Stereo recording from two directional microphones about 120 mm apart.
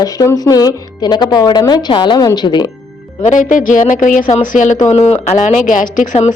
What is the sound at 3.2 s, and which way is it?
Speech, 90° left.